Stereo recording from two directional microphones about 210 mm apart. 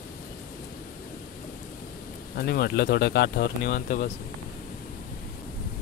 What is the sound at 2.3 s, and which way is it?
Speech, 50° left (ahead or behind).